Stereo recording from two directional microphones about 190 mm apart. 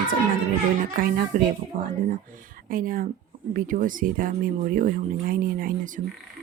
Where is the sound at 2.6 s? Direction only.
45° right (ahead or behind).